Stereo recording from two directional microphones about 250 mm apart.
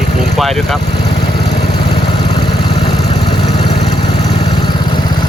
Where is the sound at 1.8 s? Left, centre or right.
Centre.